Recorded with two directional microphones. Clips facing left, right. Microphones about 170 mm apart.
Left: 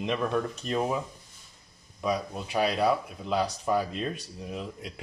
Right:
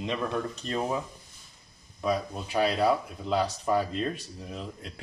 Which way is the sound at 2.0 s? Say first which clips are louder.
Right 1 dB; 5° left (ahead or behind).